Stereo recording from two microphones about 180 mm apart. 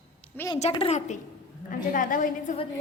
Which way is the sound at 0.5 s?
35° left (ahead or behind).